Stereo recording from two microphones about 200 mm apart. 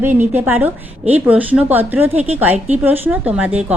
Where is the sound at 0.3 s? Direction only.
10° right (ahead or behind).